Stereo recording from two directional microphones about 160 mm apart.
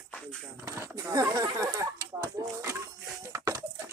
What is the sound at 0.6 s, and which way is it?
Speech, 15° right (ahead or behind).